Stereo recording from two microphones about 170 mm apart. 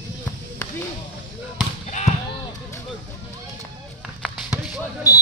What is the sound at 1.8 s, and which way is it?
Basketball bounce, 45° left (ahead or behind).